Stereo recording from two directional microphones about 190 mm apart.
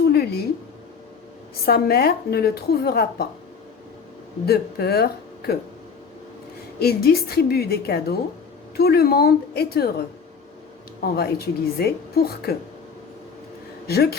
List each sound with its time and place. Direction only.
0.1 s a sound: 55° left (ahead or behind)
1.6 s a woman's voice: 55° left (ahead or behind)
4.4 s a woman's voice: 55° left (ahead or behind)
6.7 s a woman's voice: 55° left (ahead or behind)
11.0 s a woman's voice: 55° left (ahead or behind)
13.8 s a woman's voice: 55° left (ahead or behind)